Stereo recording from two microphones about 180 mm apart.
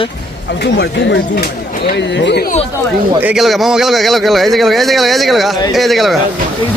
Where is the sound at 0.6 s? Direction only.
70° left (ahead or behind).